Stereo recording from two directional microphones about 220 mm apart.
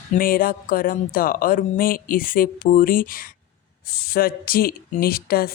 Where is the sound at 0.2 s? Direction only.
40° left (ahead or behind).